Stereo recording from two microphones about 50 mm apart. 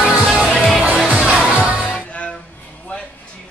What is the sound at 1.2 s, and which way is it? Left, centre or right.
Music, centre.